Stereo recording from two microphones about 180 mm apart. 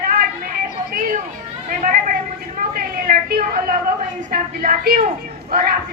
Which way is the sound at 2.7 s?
55° right (ahead or behind).